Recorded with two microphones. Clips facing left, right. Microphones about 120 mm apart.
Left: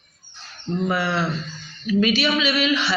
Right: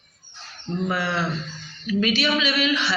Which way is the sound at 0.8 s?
25° left (ahead or behind).